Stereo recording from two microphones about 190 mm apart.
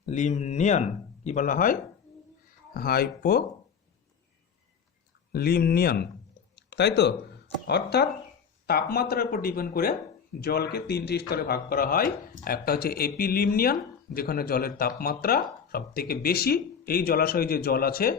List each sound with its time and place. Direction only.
0.0 s speech: 40° left (ahead or behind); by 3.4 s 55° left (ahead or behind)
5.3 s speech: 55° left (ahead or behind)